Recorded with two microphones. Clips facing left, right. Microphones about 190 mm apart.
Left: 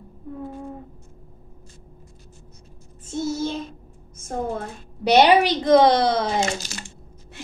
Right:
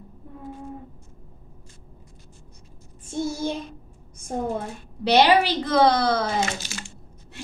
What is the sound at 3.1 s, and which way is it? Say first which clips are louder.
Child singing: left 1 dB; 10° right (ahead or behind).